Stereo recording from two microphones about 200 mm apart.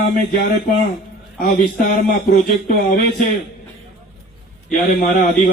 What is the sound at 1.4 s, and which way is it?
Speech, 45° left (ahead or behind).